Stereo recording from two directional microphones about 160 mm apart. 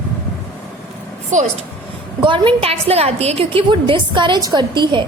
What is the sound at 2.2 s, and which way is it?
A woman's voice, 30° right (ahead or behind).